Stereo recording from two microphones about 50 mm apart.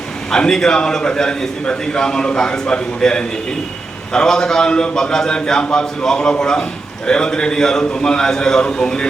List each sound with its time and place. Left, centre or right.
0.3 s a man's voice: centre